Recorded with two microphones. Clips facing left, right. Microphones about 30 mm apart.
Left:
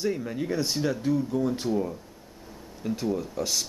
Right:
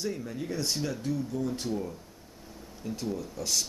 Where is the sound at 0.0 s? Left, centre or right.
Left.